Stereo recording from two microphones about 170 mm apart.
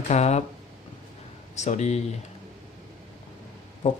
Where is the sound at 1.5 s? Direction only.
40° left (ahead or behind).